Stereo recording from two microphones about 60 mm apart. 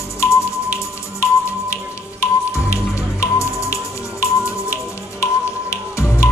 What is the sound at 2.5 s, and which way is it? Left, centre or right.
Music, left.